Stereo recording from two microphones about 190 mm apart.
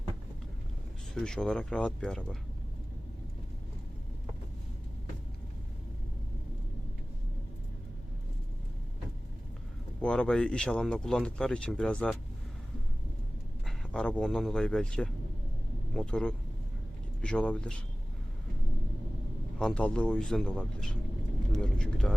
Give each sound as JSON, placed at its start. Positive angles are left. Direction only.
{"t": 1.1, "sound": "speech", "side_deg": 5}
{"t": 10.0, "sound": "speech", "side_deg": 5}
{"t": 13.7, "sound": "speech", "side_deg": 5}
{"t": 19.5, "sound": "speech", "side_deg": 5}